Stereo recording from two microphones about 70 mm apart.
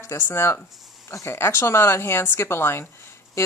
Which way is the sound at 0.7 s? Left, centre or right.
Centre.